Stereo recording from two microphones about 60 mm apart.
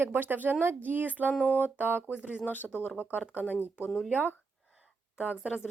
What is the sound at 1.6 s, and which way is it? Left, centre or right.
Speech, right.